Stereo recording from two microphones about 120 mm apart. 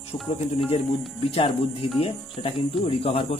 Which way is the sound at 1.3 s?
45° left (ahead or behind).